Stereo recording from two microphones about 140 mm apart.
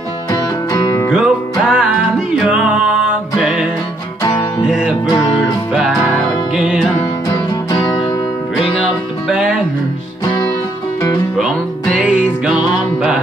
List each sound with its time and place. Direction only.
0.3 s music: 25° left (ahead or behind)
1.1 s music: 5° right (ahead or behind)
3.3 s music: 5° right (ahead or behind)
4.2 s music: 30° left (ahead or behind)
4.6 s music: 5° right (ahead or behind)
7.7 s music: 30° left (ahead or behind)
9.3 s music: 5° right (ahead or behind)
11.3 s music: centre (ahead or behind)